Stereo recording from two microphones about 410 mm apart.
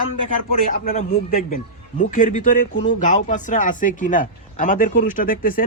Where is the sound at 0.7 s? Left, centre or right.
Left.